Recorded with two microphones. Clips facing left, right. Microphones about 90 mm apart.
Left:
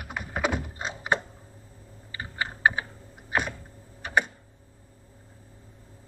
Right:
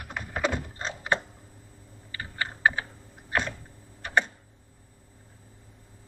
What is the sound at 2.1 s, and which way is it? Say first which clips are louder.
Computer keyboard: left 1 dB; 15° left (ahead or behind).